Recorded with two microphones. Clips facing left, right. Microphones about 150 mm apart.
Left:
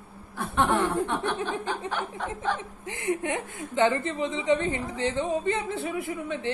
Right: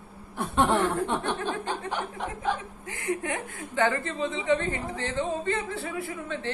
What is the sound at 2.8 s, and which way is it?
A woman's voice, 20° left (ahead or behind).